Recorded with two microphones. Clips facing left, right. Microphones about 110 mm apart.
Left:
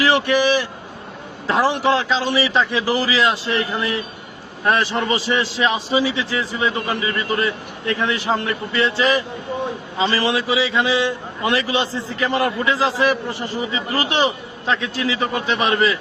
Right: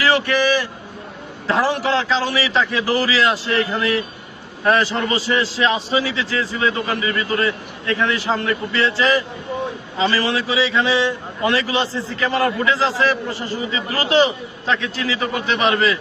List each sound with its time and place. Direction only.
0.0 s vehicle: 15° left (ahead or behind)
1.5 s a man's voice: 15° left (ahead or behind)
12.2 s a man's voice: 20° left (ahead or behind)